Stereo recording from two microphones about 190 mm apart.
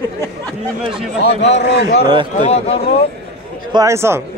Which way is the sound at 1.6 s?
60° left (ahead or behind).